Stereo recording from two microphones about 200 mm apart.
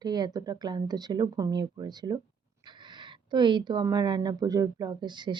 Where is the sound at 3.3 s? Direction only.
25° right (ahead or behind).